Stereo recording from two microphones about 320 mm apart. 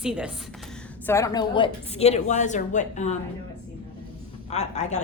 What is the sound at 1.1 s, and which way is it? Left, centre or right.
A woman's voice, centre.